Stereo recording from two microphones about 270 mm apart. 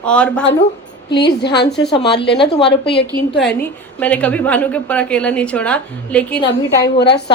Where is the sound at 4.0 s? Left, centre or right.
Centre.